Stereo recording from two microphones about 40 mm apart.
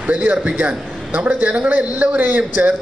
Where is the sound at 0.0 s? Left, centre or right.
Right.